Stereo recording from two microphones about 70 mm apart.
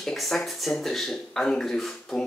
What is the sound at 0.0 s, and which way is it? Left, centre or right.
Speech, centre.